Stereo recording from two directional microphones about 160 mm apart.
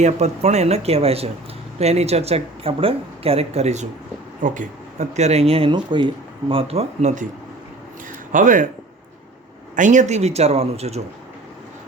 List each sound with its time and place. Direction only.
0.0 s speech: 45° right (ahead or behind)
4.4 s speech: 55° right (ahead or behind)
8.3 s speech: 55° right (ahead or behind)
9.7 s speech: 50° right (ahead or behind)